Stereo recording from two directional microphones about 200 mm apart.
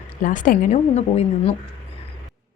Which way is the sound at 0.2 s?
40° left (ahead or behind).